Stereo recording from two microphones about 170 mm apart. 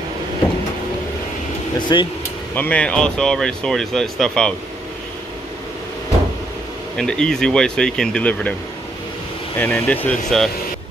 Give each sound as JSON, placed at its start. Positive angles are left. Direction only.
{"t": 1.8, "sound": "speech", "side_deg": 25}
{"t": 2.5, "sound": "speech", "side_deg": 10}
{"t": 7.0, "sound": "speech", "side_deg": 5}
{"t": 9.6, "sound": "speech", "side_deg": 10}